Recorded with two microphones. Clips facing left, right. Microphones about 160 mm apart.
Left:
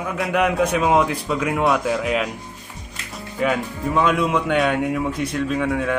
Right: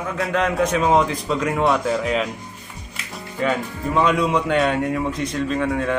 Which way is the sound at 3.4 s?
5° left (ahead or behind).